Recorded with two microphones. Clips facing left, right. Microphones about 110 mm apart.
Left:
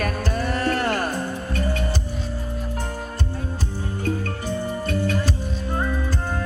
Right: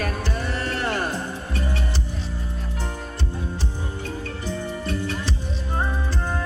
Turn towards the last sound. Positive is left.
turn(degrees=45)  # may be behind; listen again after turning